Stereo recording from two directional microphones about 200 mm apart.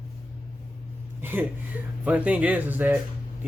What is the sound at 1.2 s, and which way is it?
Speech, 10° right (ahead or behind).